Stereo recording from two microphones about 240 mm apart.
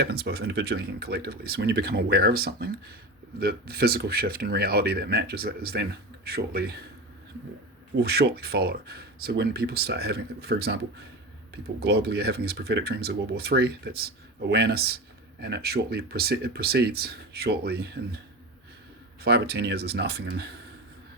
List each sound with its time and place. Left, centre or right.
0.0 s speech: right
7.9 s speech: right
11.8 s speech: right
19.2 s speech: right